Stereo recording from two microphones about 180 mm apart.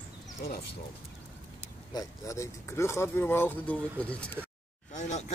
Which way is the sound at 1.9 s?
15° left (ahead or behind).